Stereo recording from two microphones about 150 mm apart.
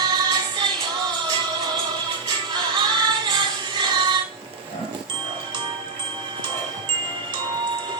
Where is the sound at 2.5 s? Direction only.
30° right (ahead or behind).